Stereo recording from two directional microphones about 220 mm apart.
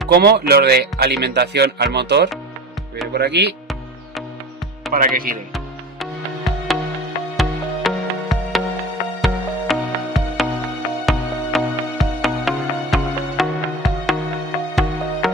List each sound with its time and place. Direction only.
0.1 s speech: 45° right (ahead or behind)
4.9 s speech: 40° right (ahead or behind)
5.5 s music: centre (ahead or behind)
15.2 s music: centre (ahead or behind)